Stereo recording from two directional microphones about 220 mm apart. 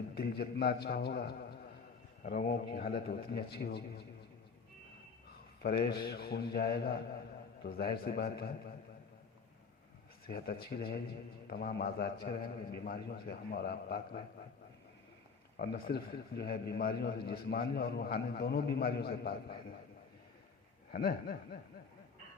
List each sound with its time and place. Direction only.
0.1 s a man's voice: 45° left (ahead or behind)
5.6 s a man's voice: 45° left (ahead or behind)
10.2 s a man's voice: 45° left (ahead or behind)
15.6 s a man's voice: 45° left (ahead or behind)
20.9 s speech: 40° left (ahead or behind)